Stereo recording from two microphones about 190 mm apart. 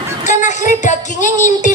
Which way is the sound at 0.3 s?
40° left (ahead or behind).